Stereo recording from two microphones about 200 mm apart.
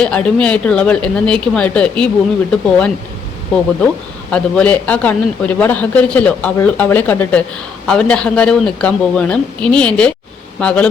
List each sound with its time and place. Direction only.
0.0 s speech: 5° left (ahead or behind)
4.3 s speech: 5° left (ahead or behind)